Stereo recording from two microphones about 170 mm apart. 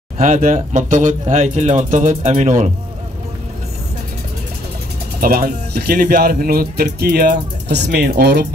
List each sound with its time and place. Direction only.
0.2 s speech: 50° right (ahead or behind)
5.2 s speech: 65° right (ahead or behind)